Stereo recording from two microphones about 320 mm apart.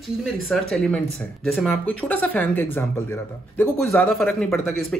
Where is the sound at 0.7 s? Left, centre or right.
Centre.